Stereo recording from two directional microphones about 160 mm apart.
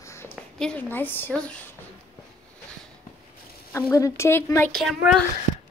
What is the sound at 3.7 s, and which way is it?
Speech, 20° left (ahead or behind).